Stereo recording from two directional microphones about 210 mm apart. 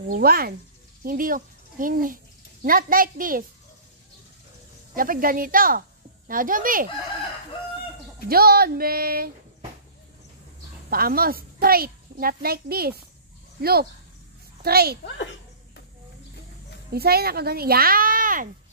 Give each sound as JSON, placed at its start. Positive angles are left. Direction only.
{"t": 0.1, "sound": "a child's voice", "side_deg": -45}
{"t": 4.9, "sound": "speech", "side_deg": -40}
{"t": 8.3, "sound": "a child's voice", "side_deg": -45}
{"t": 10.9, "sound": "a child's voice", "side_deg": -45}
{"t": 16.9, "sound": "a child's voice", "side_deg": -45}